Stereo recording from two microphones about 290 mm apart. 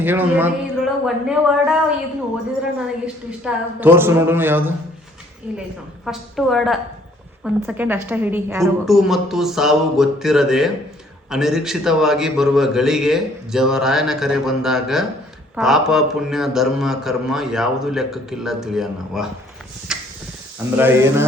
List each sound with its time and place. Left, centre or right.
0.0 s a man's voice: centre
3.4 s a woman's voice: centre
19.9 s a sound: centre
20.7 s a woman's voice: centre